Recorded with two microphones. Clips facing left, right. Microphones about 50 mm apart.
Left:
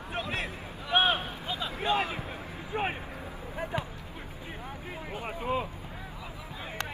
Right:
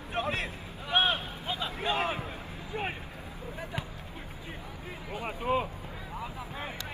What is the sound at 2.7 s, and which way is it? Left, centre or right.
Speech, left.